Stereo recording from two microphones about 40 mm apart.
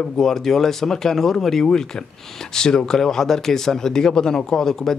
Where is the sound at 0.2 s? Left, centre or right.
Centre.